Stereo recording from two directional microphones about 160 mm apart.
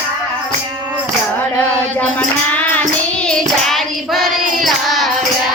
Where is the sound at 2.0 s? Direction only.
10° left (ahead or behind).